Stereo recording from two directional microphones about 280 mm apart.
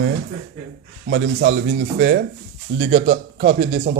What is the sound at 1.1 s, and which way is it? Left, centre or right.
A man's voice, right.